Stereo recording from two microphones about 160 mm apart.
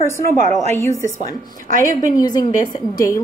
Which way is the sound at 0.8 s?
20° left (ahead or behind).